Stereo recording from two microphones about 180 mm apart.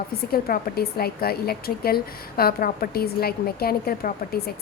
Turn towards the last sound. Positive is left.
turn(degrees=55)  # may be behind; listen again after turning